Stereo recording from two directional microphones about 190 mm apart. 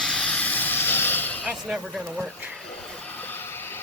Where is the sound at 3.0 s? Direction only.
10° left (ahead or behind).